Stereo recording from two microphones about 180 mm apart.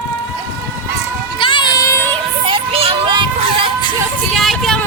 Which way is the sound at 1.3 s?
25° left (ahead or behind).